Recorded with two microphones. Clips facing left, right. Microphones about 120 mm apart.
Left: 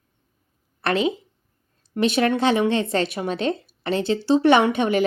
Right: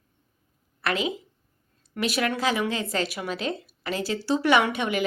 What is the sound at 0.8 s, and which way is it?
A woman's voice, 30° left (ahead or behind).